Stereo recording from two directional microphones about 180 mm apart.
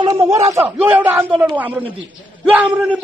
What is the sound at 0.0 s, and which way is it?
A man's voice, 20° right (ahead or behind).